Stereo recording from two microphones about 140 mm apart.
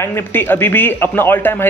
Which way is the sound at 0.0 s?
15° left (ahead or behind).